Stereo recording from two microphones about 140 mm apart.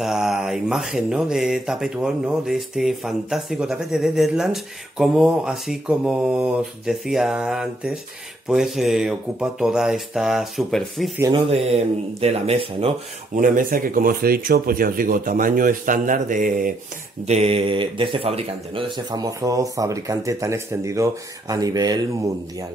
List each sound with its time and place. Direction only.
0.0 s speech: 5° right (ahead or behind)
11.3 s speech: 45° right (ahead or behind)
13.4 s speech: 80° right
17.3 s speech: 45° right (ahead or behind); by 22.0 s 25° right (ahead or behind)